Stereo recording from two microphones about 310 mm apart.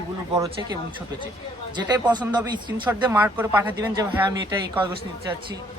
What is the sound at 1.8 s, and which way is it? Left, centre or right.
A man's voice, centre.